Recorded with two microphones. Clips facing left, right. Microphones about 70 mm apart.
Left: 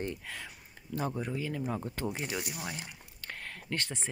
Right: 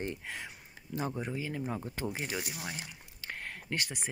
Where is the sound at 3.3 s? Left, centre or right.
Centre.